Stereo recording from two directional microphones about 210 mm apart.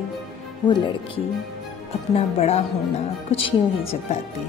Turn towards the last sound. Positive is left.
turn(degrees=25)  # may be behind; listen again after turning